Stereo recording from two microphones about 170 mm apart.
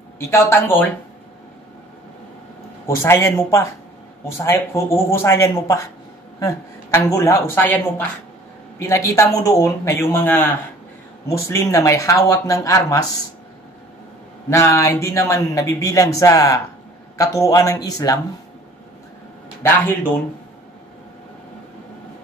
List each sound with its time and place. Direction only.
0.3 s speech: 15° left (ahead or behind)
3.0 s speech: 15° left (ahead or behind)
14.5 s speech: 20° left (ahead or behind)
19.6 s speech: 10° left (ahead or behind)